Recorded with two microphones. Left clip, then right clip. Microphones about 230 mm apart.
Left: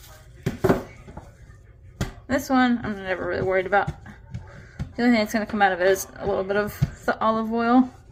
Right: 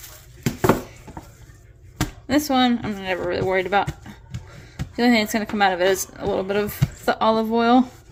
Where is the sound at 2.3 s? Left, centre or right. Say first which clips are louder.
Right 2 dB; right.